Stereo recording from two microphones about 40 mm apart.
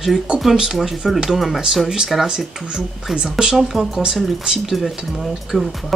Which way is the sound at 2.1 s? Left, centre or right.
Centre.